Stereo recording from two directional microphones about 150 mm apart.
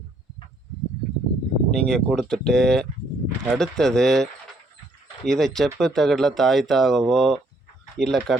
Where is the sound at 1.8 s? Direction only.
5° left (ahead or behind).